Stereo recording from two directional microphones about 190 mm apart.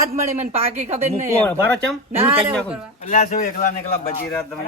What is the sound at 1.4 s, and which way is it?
Speech, 10° left (ahead or behind).